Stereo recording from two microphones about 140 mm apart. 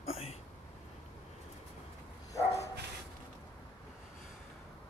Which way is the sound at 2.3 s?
20° left (ahead or behind).